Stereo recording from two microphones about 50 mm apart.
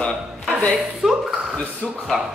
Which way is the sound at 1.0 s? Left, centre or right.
Centre.